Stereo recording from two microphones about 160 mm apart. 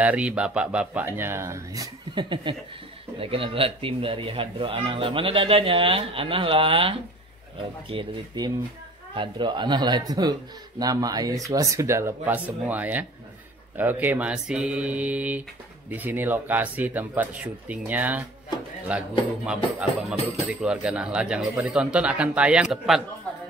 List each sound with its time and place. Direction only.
0.0 s speech: 10° right (ahead or behind)